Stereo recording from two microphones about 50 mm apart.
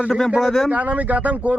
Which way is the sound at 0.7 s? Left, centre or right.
Right.